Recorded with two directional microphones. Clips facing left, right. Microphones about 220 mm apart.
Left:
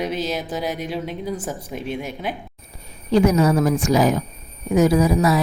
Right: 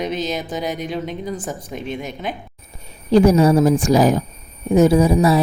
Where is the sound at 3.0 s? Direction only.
30° right (ahead or behind).